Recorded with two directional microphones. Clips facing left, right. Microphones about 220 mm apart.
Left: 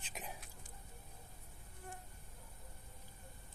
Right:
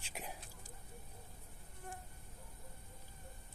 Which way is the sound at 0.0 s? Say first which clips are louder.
Right 1 dB; 10° right (ahead or behind).